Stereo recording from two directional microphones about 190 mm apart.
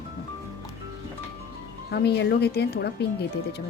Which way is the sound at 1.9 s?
60° left (ahead or behind).